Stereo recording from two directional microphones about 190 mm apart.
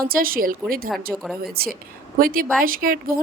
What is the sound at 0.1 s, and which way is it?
Speech, 50° right (ahead or behind).